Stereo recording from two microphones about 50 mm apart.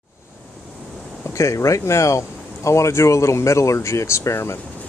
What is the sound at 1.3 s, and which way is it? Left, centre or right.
Speech, left.